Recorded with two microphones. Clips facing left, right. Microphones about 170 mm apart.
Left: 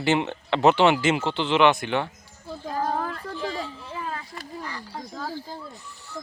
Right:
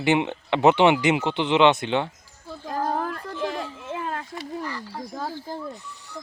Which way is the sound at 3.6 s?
55° right (ahead or behind).